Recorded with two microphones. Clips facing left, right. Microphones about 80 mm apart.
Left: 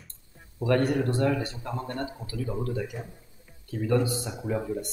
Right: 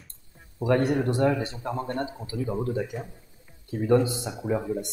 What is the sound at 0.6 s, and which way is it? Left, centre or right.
Speech, centre.